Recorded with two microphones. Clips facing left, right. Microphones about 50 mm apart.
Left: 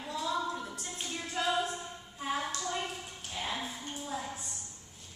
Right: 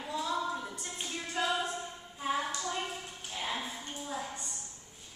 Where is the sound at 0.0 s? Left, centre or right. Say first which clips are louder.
Even; centre.